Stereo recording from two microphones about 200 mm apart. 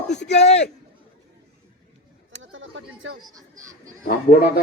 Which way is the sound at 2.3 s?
70° right (ahead or behind).